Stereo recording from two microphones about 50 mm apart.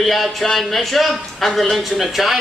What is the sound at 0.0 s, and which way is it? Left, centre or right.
A man's voice, centre.